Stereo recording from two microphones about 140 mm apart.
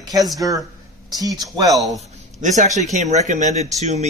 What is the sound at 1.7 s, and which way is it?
Speech, centre (ahead or behind).